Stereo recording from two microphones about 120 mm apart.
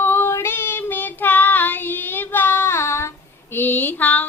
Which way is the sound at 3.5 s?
15° left (ahead or behind).